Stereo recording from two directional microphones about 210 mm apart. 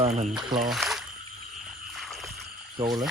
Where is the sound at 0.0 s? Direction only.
30° right (ahead or behind).